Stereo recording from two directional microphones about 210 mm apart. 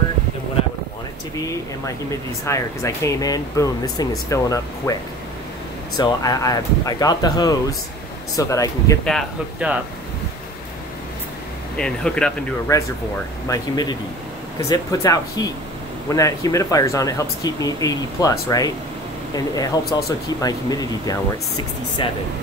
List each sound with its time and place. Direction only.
2.4 s speech: 15° left (ahead or behind)
5.9 s speech: 20° left (ahead or behind)
9.0 s speech: centre (ahead or behind)
11.7 s speech: 5° left (ahead or behind)
12.7 s speech: 15° left (ahead or behind)